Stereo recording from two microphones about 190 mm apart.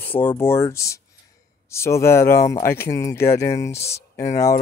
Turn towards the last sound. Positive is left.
turn(degrees=15)  # may be behind; listen again after turning